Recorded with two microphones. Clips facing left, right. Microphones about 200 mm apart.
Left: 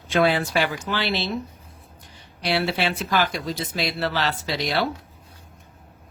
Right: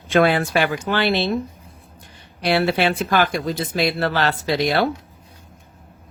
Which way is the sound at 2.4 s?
55° right (ahead or behind).